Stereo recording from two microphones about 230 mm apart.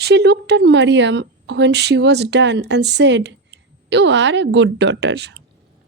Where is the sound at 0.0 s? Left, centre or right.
Right.